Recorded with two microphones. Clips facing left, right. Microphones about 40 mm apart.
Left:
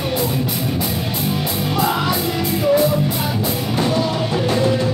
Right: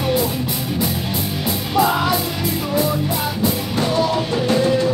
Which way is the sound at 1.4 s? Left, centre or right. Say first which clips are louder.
Right 4 dB; centre.